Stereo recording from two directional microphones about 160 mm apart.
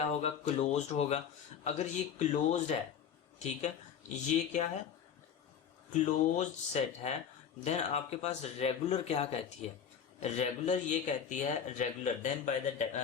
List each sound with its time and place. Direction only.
0.0 s speech: 40° left (ahead or behind)
4.1 s speech: 45° left (ahead or behind)
5.9 s speech: 50° left (ahead or behind)